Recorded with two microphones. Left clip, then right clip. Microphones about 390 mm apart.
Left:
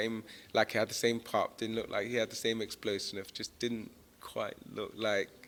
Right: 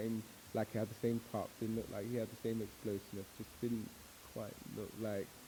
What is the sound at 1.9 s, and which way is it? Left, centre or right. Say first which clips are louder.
Speech: left 12 dB; centre.